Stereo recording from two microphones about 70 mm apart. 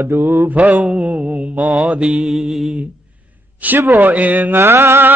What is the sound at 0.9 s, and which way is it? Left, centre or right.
Mantra, right.